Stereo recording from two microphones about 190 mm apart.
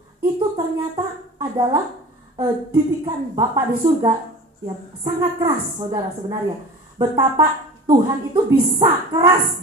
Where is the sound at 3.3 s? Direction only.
20° right (ahead or behind).